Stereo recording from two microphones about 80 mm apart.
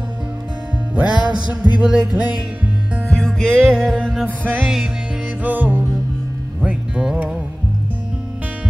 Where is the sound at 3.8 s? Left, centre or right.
Centre.